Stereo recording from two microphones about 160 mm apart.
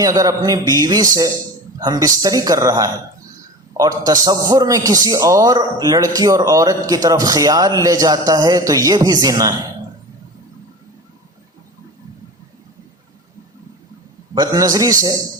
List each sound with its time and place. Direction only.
0.0 s a man's voice: 20° right (ahead or behind)
14.3 s a man's voice: 20° right (ahead or behind)